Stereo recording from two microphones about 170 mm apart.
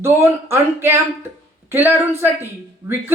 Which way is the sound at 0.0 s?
15° right (ahead or behind).